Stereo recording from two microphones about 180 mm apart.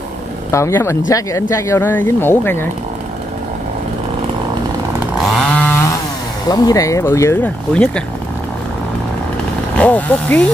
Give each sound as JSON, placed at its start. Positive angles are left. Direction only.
{"t": 0.5, "sound": "speech", "side_deg": 15}
{"t": 5.1, "sound": "chainsaw", "side_deg": 0}
{"t": 6.4, "sound": "speech", "side_deg": 20}
{"t": 9.8, "sound": "speech", "side_deg": 10}